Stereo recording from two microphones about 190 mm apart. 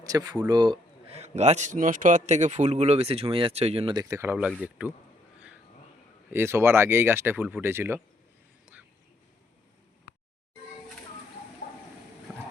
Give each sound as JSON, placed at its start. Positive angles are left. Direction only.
{"t": 0.0, "sound": "a man's voice", "side_deg": -20}
{"t": 6.3, "sound": "speech", "side_deg": -10}
{"t": 11.6, "sound": "a sound", "side_deg": 50}